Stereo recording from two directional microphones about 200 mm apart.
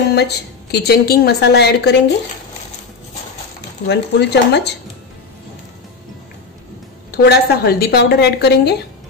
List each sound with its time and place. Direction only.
0.1 s a woman's voice: 55° left (ahead or behind)
3.8 s a woman's voice: 60° left (ahead or behind)
7.1 s a woman's voice: 50° left (ahead or behind)